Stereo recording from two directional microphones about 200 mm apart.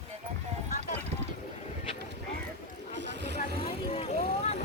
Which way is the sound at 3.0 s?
60° right (ahead or behind).